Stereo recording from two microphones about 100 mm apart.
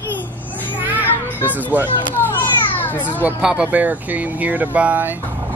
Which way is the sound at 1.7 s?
20° right (ahead or behind).